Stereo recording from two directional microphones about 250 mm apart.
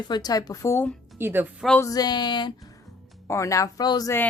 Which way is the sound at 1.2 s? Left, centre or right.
Centre.